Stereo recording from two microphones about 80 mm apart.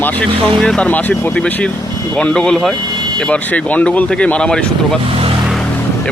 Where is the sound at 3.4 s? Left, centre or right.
Centre.